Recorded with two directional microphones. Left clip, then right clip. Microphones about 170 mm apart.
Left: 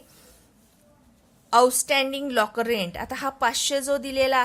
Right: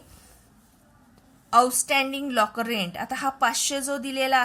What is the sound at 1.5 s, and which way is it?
A woman's voice, 25° left (ahead or behind).